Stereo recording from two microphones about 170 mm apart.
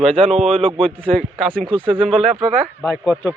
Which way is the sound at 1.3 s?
Centre (ahead or behind).